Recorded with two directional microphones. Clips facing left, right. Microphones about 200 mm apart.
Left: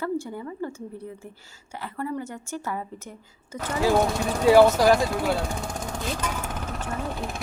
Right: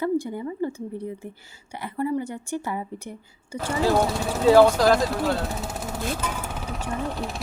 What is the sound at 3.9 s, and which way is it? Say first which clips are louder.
Speech: even; centre (ahead or behind).